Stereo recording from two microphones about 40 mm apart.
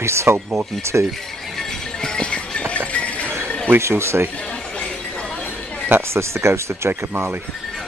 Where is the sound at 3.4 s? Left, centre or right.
Left.